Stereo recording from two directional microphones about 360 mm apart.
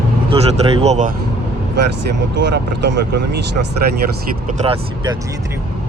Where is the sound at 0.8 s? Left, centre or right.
Centre.